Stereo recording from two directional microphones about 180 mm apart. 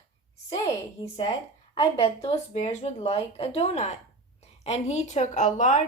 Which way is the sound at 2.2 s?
40° left (ahead or behind).